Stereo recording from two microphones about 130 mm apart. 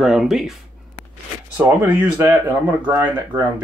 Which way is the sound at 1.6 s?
10° right (ahead or behind).